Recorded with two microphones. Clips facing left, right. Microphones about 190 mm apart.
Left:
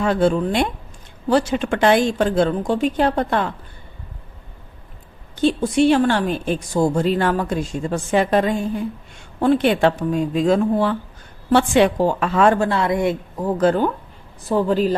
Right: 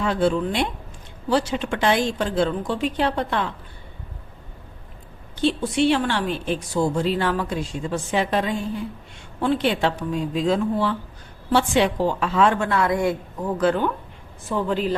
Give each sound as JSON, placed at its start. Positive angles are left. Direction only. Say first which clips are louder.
{"t": 0.0, "sound": "speech", "louder": "left 3 dB", "side_deg": 45}
{"t": 5.4, "sound": "speech", "louder": "left 4 dB", "side_deg": 45}
{"t": 12.5, "sound": "a woman's voice", "louder": "left 2 dB", "side_deg": 30}
{"t": 13.6, "sound": "speech", "louder": "left 3 dB", "side_deg": 40}